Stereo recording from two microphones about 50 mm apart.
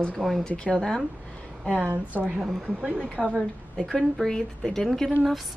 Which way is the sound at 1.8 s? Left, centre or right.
Right.